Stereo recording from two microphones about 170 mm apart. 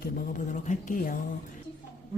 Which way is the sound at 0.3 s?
45° left (ahead or behind).